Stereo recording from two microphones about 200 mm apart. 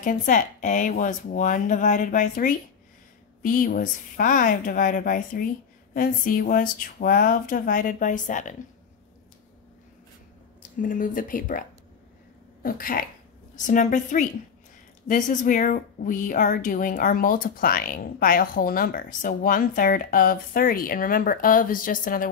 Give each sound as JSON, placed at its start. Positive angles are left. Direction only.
{"t": 0.0, "sound": "speech", "side_deg": 40}
{"t": 10.8, "sound": "speech", "side_deg": 40}
{"t": 12.6, "sound": "speech", "side_deg": 45}